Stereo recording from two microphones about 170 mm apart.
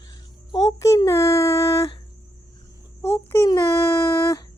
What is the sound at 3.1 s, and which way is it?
Speech, 15° left (ahead or behind).